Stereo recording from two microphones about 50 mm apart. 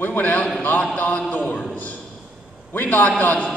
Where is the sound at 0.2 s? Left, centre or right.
Left.